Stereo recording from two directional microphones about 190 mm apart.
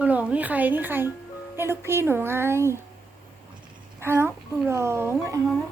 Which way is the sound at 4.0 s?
10° right (ahead or behind).